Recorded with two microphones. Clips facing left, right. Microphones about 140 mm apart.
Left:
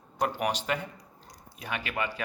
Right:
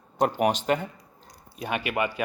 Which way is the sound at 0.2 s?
25° right (ahead or behind).